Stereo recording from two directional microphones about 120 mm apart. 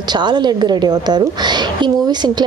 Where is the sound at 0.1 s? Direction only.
40° right (ahead or behind).